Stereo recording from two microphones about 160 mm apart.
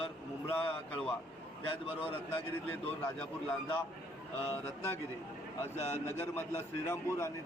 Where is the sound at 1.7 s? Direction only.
35° left (ahead or behind).